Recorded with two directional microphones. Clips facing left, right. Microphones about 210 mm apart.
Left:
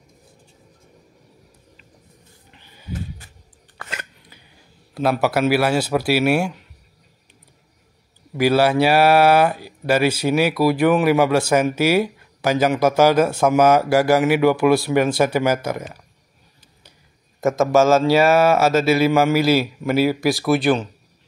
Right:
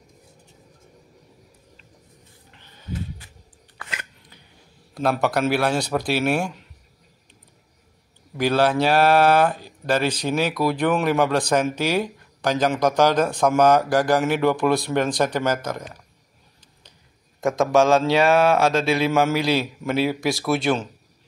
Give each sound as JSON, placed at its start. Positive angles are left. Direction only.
{"t": 2.5, "sound": "a sound", "side_deg": 10}
{"t": 3.7, "sound": "chewing", "side_deg": 45}
{"t": 4.9, "sound": "speech", "side_deg": 5}
{"t": 8.4, "sound": "speech", "side_deg": 10}
{"t": 17.4, "sound": "speech", "side_deg": 0}